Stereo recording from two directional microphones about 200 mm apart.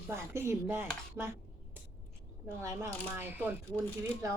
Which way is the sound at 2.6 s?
15° right (ahead or behind).